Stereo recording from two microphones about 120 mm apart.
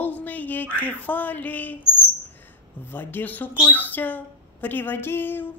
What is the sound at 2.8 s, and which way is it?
Speech, 15° left (ahead or behind).